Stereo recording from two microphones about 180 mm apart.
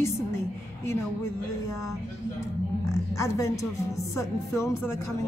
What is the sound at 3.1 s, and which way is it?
A woman's voice, 15° left (ahead or behind).